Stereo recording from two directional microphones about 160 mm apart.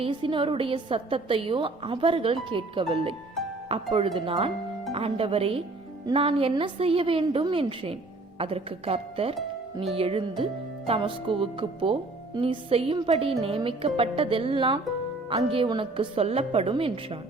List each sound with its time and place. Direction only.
0.0 s a woman's voice: 35° right (ahead or behind)